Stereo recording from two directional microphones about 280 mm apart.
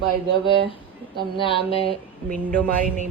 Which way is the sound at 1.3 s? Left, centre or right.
Centre.